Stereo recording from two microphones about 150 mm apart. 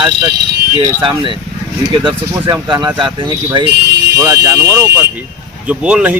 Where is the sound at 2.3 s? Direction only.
25° right (ahead or behind).